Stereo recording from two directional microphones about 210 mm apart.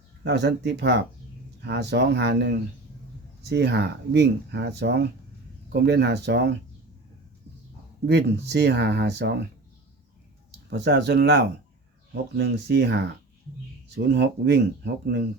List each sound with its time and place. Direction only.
0.3 s speech: 55° right (ahead or behind)
8.0 s speech: 50° right (ahead or behind)
10.7 s speech: 55° right (ahead or behind)